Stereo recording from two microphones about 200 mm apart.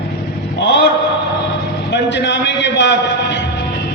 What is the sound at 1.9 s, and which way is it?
A man's voice, 60° left (ahead or behind).